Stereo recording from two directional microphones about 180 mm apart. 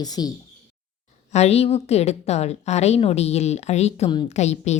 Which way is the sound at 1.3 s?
35° left (ahead or behind).